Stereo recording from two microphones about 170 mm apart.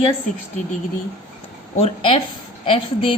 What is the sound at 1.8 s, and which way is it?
A woman's voice, 30° left (ahead or behind).